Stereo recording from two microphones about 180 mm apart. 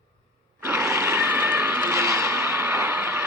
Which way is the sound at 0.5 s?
10° right (ahead or behind).